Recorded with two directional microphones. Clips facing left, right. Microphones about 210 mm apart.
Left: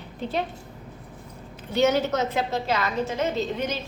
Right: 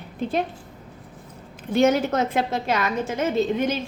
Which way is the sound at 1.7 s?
50° right (ahead or behind).